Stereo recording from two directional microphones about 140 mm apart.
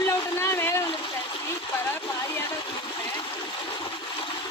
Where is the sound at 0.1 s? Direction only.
20° left (ahead or behind).